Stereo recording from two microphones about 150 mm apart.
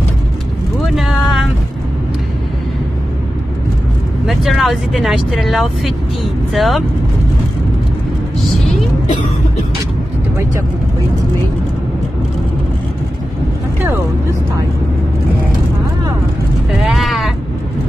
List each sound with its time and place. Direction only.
0.9 s a sound: centre (ahead or behind)
4.3 s speech: centre (ahead or behind)
16.8 s sheep: centre (ahead or behind)